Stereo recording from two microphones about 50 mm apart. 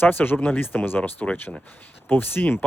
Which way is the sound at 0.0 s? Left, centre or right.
Left.